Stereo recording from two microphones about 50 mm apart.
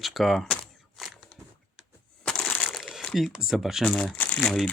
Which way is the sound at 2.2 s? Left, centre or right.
Centre.